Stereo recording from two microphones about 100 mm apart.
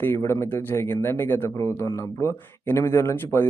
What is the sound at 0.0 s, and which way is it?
Speech, 25° left (ahead or behind).